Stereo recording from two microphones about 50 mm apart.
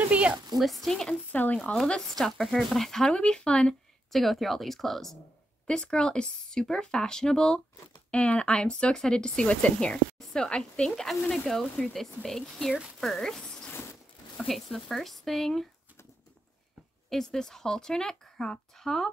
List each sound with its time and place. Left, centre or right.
0.1 s speech: right
0.6 s speech: centre
1.3 s speech: left
1.6 s speech: centre
4.1 s speech: centre
5.7 s speech: centre
9.8 s speech: centre
14.5 s speech: centre
17.1 s speech: centre